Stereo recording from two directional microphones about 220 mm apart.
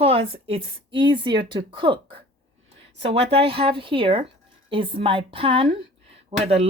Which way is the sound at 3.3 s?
25° right (ahead or behind).